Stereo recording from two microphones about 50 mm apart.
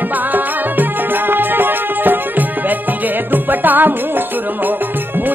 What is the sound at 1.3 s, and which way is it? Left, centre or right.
Music, right.